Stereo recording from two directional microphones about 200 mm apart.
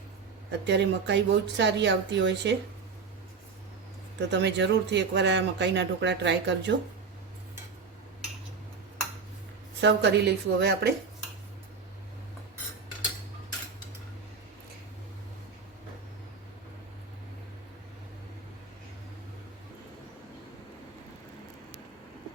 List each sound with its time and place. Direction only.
0.6 s speech: 60° right (ahead or behind)
4.3 s speech: 60° right (ahead or behind)
9.8 s speech: 55° right (ahead or behind)